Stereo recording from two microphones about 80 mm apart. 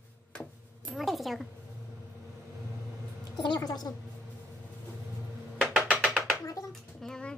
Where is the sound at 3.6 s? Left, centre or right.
Left.